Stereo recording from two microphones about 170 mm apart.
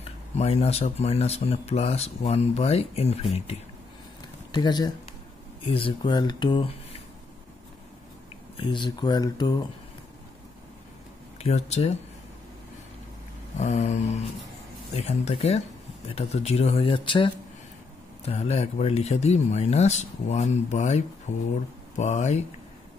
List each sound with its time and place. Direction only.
0.0 s speech: 40° left (ahead or behind)
4.5 s speech: 25° left (ahead or behind)
8.5 s speech: 30° left (ahead or behind)
11.3 s speech: 40° left (ahead or behind)
13.6 s speech: 40° left (ahead or behind)